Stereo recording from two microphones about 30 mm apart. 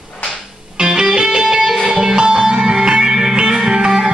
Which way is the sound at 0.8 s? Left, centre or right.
Right.